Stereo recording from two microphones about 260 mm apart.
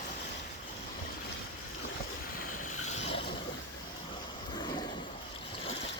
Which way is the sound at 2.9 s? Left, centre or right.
Left.